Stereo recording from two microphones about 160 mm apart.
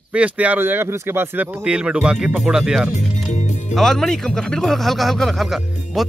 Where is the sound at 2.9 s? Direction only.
45° left (ahead or behind).